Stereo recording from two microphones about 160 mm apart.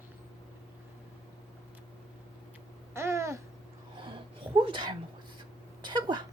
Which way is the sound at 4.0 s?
30° right (ahead or behind).